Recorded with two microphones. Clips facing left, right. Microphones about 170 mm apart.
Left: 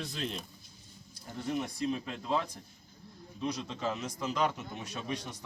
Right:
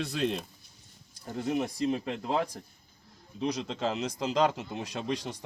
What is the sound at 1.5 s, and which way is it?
Speech, 70° right (ahead or behind).